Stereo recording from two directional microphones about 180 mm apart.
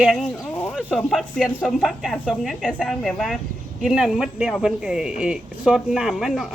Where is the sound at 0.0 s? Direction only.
Centre (ahead or behind).